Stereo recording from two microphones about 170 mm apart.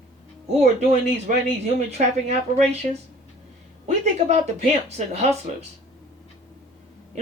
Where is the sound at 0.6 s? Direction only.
40° right (ahead or behind).